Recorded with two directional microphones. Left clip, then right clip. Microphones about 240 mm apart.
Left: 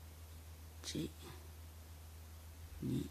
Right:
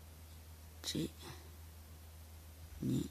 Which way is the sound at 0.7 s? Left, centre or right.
Centre.